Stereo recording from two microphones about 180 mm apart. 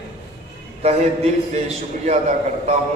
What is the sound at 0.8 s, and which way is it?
Speech, 35° right (ahead or behind).